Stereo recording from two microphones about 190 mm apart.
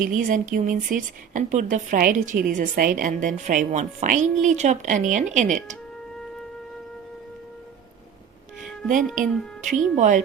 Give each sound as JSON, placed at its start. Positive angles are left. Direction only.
{"t": 0.0, "sound": "a woman's voice", "side_deg": -45}
{"t": 9.2, "sound": "a woman's voice", "side_deg": -40}